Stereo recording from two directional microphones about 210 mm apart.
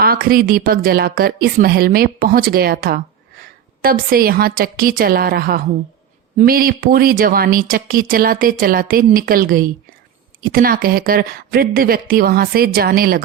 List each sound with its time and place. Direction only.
0.0 s speech: 45° right (ahead or behind)